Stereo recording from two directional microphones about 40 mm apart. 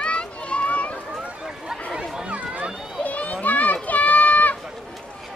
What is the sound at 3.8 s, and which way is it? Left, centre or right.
Run, left.